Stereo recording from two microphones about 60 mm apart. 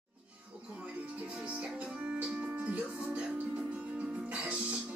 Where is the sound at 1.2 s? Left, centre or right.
Right.